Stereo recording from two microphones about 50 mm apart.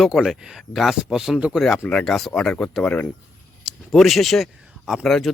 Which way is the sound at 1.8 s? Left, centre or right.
Centre.